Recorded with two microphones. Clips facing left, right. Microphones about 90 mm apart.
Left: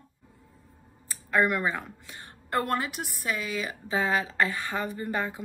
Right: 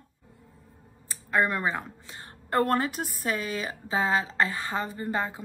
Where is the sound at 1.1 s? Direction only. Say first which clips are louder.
Left 1 dB; 25° right (ahead or behind).